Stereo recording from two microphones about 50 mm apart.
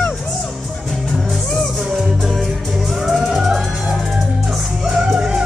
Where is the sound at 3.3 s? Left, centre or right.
Centre.